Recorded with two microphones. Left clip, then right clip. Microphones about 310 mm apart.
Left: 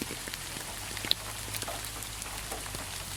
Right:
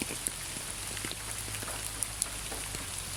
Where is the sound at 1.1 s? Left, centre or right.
Left.